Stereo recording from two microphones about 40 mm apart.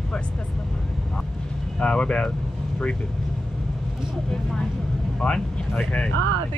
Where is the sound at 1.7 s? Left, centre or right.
Left.